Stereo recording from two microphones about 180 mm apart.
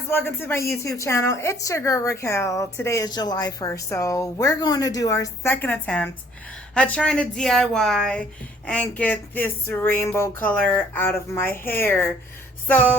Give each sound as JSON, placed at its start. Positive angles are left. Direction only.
{"t": 0.1, "sound": "a woman's voice", "side_deg": 10}